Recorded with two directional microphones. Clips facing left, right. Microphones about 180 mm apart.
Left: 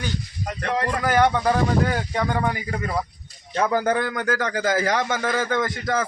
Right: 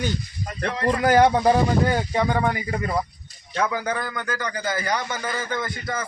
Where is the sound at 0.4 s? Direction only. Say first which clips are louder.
Left 3 dB; 75° left (ahead or behind).